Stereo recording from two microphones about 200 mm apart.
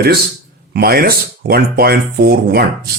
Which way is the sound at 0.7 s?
50° right (ahead or behind).